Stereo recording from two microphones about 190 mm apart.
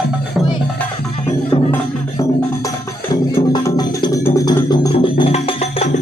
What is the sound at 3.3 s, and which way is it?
Music, 20° left (ahead or behind).